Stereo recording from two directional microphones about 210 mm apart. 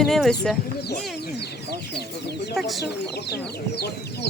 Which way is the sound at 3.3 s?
50° left (ahead or behind).